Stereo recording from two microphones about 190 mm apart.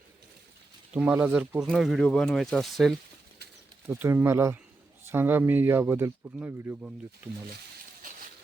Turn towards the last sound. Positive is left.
turn(degrees=-10)  # may be behind; listen again after turning